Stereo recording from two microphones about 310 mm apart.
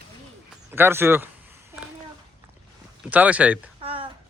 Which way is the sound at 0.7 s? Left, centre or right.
Centre.